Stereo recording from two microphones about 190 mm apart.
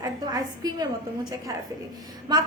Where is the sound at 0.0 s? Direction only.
20° right (ahead or behind).